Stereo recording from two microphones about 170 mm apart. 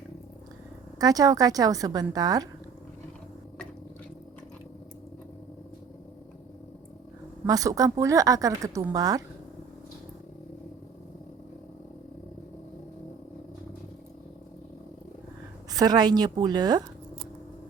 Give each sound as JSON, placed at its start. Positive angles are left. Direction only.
{"t": 0.9, "sound": "speech", "side_deg": -20}
{"t": 7.4, "sound": "speech", "side_deg": -20}
{"t": 15.7, "sound": "speech", "side_deg": -25}